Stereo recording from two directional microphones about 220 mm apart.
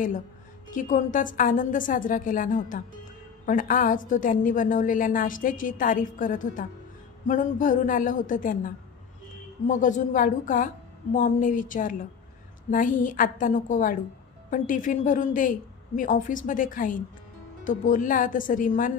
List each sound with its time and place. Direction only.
0.7 s a woman's voice: 35° left (ahead or behind)